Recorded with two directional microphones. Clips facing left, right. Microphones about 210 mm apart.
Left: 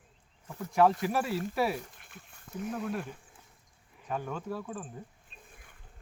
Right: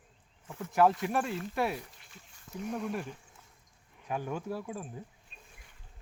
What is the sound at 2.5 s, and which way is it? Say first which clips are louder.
Speech: left 1 dB; centre (ahead or behind).